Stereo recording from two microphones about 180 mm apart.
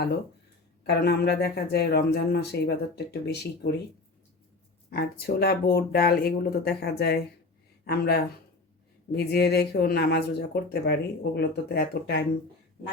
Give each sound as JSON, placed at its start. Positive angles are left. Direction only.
{"t": 0.9, "sound": "speech", "side_deg": 65}
{"t": 4.9, "sound": "speech", "side_deg": 60}